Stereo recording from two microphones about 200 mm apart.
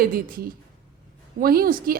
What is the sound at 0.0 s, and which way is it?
Speech, 45° right (ahead or behind).